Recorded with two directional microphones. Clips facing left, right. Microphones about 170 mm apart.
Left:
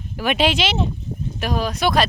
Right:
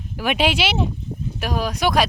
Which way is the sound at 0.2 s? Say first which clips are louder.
Left 1 dB; 10° right (ahead or behind).